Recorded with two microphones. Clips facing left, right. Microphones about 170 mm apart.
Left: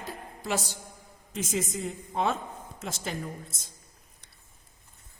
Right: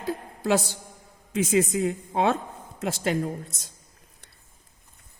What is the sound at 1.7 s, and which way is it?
A woman's voice, 70° right (ahead or behind).